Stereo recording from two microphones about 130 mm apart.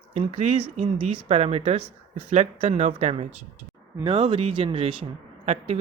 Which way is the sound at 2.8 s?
65° right (ahead or behind).